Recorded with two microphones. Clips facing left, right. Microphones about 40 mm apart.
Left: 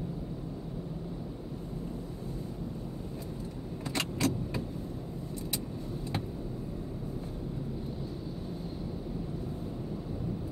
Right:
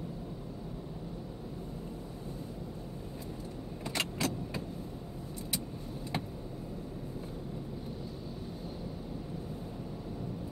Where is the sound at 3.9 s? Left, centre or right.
Centre.